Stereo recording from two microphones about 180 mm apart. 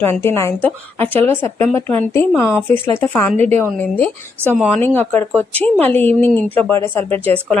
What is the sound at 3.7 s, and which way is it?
Speech, 10° left (ahead or behind).